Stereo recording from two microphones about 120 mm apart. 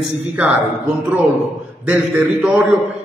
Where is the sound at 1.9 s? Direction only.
15° right (ahead or behind).